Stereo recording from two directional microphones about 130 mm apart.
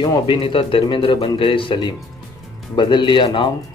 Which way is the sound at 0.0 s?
35° left (ahead or behind).